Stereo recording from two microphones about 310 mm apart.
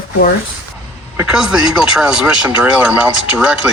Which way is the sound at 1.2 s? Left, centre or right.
Centre.